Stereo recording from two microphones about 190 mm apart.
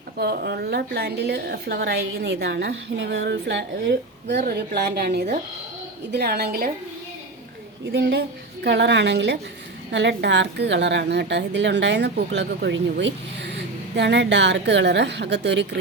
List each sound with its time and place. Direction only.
0.2 s a woman's voice: 55° right (ahead or behind)
7.9 s a woman's voice: 60° right (ahead or behind)